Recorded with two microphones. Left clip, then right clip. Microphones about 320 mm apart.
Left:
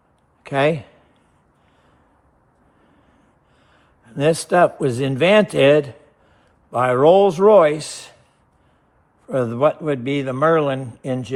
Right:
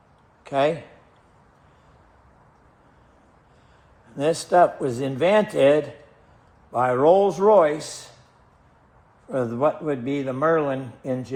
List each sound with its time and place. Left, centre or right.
0.4 s a man's voice: left
4.1 s a man's voice: left
6.7 s a man's voice: left
9.3 s a man's voice: left